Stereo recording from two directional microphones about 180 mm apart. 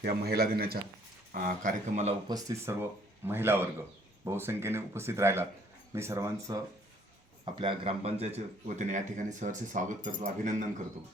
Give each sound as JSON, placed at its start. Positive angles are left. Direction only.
{"t": 0.0, "sound": "a man's voice", "side_deg": -60}
{"t": 2.2, "sound": "speech", "side_deg": -20}
{"t": 7.4, "sound": "speech", "side_deg": -30}